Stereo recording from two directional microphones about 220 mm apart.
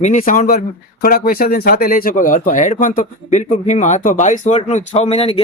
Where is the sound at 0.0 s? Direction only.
35° left (ahead or behind).